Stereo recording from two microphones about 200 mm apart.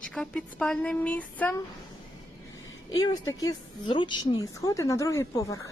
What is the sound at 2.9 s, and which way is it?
A woman's voice, 20° left (ahead or behind).